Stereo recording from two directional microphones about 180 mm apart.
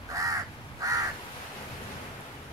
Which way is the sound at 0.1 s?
20° right (ahead or behind).